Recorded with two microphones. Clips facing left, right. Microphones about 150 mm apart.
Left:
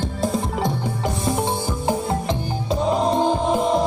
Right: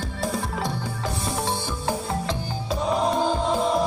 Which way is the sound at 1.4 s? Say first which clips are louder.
Left 4 dB; 20° left (ahead or behind).